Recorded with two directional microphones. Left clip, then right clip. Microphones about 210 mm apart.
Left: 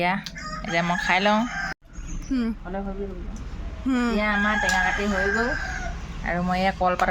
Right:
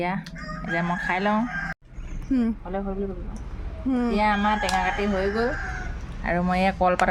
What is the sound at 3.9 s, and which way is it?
Speech, centre (ahead or behind).